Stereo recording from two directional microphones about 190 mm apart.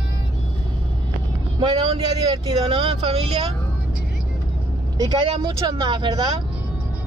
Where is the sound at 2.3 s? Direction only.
30° right (ahead or behind).